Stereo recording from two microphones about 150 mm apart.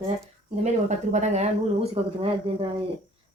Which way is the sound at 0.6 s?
50° right (ahead or behind).